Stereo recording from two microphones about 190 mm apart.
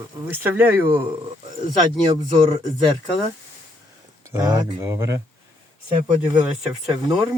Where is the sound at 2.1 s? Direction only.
20° right (ahead or behind).